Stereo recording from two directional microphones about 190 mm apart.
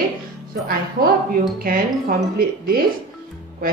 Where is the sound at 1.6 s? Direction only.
50° right (ahead or behind).